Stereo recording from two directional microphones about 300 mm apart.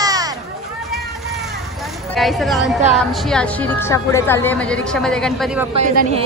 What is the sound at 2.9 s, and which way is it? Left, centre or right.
A woman's voice, centre.